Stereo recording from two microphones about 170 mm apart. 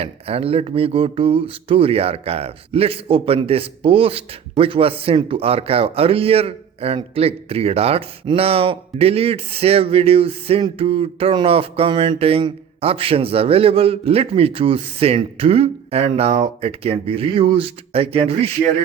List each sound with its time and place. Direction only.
0.0 s speech: 35° right (ahead or behind)